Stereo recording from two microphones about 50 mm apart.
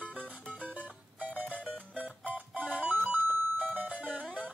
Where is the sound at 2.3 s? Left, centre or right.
Right.